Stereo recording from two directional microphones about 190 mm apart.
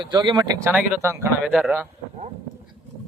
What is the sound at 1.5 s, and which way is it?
Speech, centre (ahead or behind).